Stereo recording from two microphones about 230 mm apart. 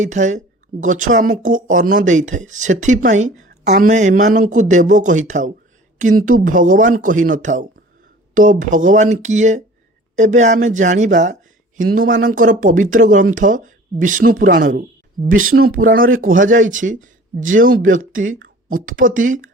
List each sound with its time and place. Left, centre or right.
0.0 s speech: right
3.5 s a sound: right
3.8 s speech: right
15.3 s speech: right
15.5 s speech: right